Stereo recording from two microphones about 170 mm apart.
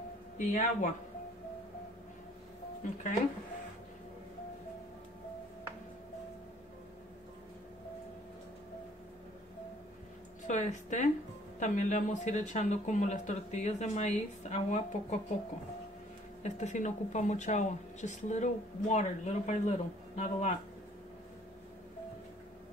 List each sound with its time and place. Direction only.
0.4 s speech: 45° left (ahead or behind)
2.8 s speech: 45° left (ahead or behind)
10.4 s speech: 45° left (ahead or behind)
16.4 s speech: 45° left (ahead or behind)